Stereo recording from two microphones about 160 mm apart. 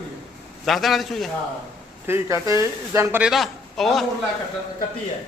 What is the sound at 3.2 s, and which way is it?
Speech, centre (ahead or behind).